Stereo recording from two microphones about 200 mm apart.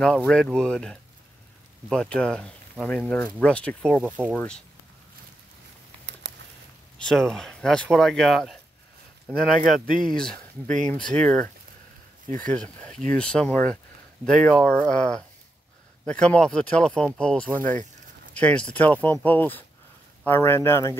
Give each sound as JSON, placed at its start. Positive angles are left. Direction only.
{"t": 0.0, "sound": "speech", "side_deg": 5}
{"t": 6.2, "sound": "a sound", "side_deg": -60}
{"t": 7.0, "sound": "speech", "side_deg": 5}
{"t": 9.7, "sound": "speech", "side_deg": 0}
{"t": 10.3, "sound": "speech", "side_deg": -40}
{"t": 11.2, "sound": "speech", "side_deg": 5}